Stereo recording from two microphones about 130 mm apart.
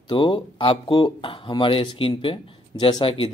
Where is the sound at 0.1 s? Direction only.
40° left (ahead or behind).